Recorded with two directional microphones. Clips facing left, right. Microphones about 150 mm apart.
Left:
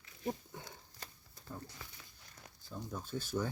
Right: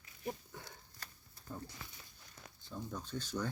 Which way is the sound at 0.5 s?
20° left (ahead or behind).